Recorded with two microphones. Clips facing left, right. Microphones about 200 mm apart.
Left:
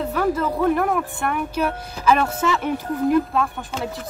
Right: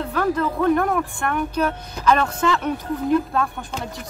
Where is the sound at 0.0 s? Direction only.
5° left (ahead or behind).